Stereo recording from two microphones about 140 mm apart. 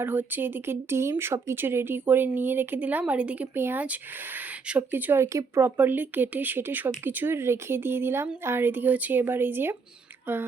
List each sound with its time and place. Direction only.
0.0 s speech: 15° right (ahead or behind)